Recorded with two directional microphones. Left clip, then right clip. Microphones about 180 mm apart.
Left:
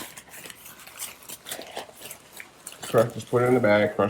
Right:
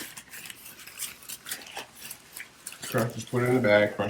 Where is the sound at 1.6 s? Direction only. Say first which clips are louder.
Left 3 dB; 60° left (ahead or behind).